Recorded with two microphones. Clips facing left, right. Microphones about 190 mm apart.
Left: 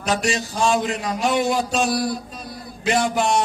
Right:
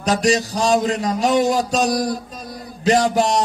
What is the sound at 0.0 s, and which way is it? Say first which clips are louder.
Speech: right 5 dB; 40° right (ahead or behind).